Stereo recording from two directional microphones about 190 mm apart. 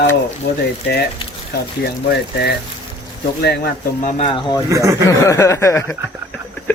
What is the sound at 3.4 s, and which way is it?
Speech, 55° left (ahead or behind).